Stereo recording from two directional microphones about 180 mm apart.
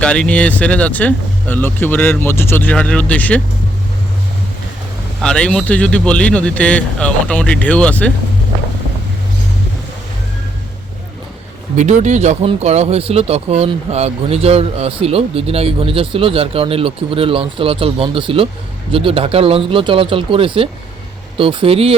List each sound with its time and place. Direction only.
0.0 s speech: 5° left (ahead or behind)
5.2 s speech: 5° left (ahead or behind)
11.8 s speech: 40° right (ahead or behind)